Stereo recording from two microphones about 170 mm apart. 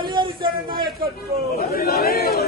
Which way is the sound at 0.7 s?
60° right (ahead or behind).